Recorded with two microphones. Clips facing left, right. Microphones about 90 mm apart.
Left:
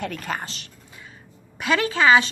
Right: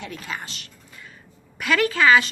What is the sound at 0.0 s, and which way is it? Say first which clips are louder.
Speech: left 4 dB; 50° left (ahead or behind).